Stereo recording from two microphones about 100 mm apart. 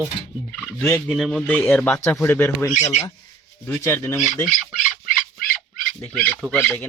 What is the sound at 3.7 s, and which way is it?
Speech, 20° left (ahead or behind).